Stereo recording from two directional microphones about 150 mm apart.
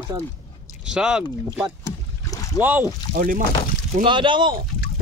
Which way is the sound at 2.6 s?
10° right (ahead or behind).